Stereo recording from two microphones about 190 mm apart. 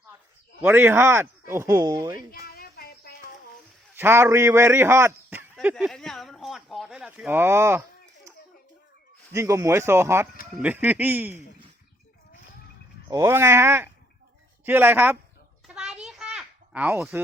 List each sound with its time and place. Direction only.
0.6 s speech: 10° right (ahead or behind)
2.3 s a sound: 55° left (ahead or behind)
3.9 s speech: 10° right (ahead or behind)
5.7 s speech: centre (ahead or behind); by 8.3 s 15° right (ahead or behind)
9.3 s speech: 15° right (ahead or behind)
13.1 s speech: 15° right (ahead or behind)
15.6 s children playing: 5° right (ahead or behind)